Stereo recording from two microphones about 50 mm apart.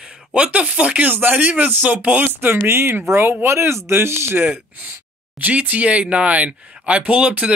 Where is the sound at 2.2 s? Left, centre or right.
Right.